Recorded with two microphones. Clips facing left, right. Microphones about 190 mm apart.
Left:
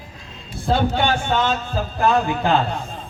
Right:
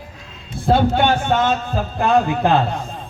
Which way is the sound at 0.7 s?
55° right (ahead or behind).